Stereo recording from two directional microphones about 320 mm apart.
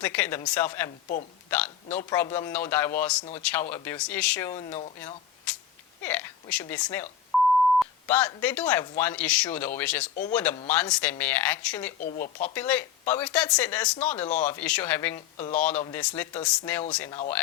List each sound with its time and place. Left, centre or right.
0.0 s a man's voice: centre
7.3 s beep: centre
7.8 s speech: centre
11.9 s speech: left
12.5 s speech: centre
15.4 s speech: centre
15.8 s speech: centre